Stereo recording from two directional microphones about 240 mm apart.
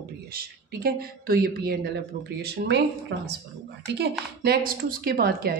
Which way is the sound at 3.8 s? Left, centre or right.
Right.